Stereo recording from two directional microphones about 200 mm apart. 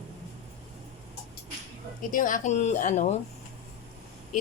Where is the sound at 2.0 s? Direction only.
40° left (ahead or behind).